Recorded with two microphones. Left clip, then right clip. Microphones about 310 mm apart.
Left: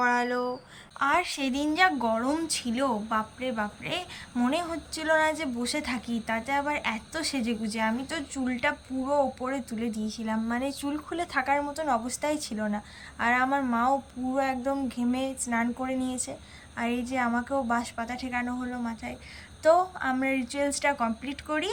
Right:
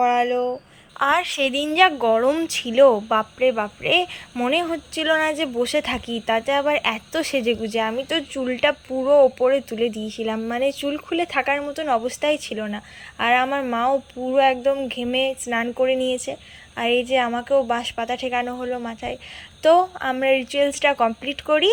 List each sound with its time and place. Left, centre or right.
0.9 s a woman's voice: centre